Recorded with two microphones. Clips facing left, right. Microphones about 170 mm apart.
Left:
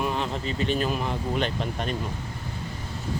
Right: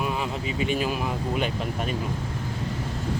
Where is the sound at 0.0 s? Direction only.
5° right (ahead or behind).